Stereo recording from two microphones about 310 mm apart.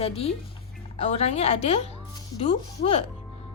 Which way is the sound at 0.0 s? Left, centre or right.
Centre.